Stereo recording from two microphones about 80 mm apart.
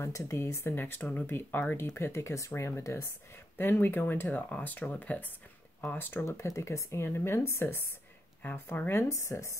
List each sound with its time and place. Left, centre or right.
0.0 s speech: left
3.5 s speech: left
8.4 s speech: left